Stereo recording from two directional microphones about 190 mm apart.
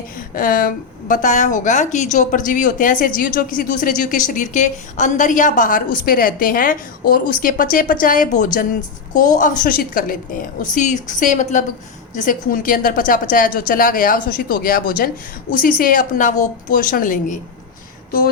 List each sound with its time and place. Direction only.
0.3 s a woman's voice: 45° left (ahead or behind)